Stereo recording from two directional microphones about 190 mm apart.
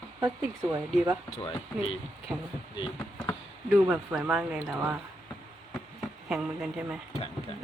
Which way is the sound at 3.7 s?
5° right (ahead or behind).